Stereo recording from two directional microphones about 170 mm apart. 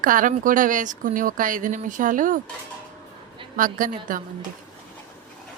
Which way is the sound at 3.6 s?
50° right (ahead or behind).